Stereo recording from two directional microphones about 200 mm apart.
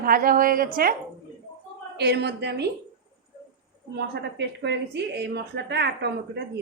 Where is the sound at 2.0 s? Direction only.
55° right (ahead or behind).